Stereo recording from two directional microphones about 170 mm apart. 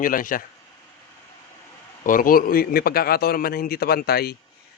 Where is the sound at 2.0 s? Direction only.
55° left (ahead or behind).